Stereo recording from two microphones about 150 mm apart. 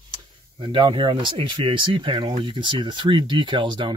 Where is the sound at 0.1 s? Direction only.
35° right (ahead or behind).